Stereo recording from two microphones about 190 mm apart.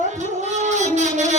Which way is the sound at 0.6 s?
40° right (ahead or behind).